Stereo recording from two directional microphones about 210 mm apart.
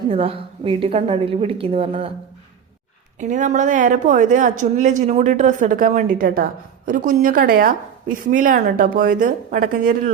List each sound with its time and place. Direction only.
0.1 s a woman's voice: 25° right (ahead or behind)
3.2 s a woman's voice: 35° right (ahead or behind)